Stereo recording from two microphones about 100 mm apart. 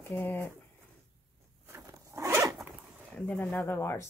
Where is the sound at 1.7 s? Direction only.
30° right (ahead or behind).